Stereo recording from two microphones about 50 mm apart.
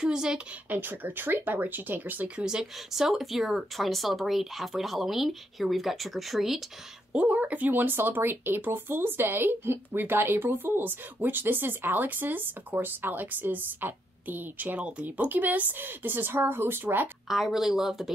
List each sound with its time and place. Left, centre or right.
0.0 s speech: centre
0.7 s speech: right
2.4 s speech: centre
7.1 s speech: right
17.3 s speech: centre